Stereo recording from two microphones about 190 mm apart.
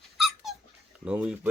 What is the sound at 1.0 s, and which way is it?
Speech, 5° right (ahead or behind).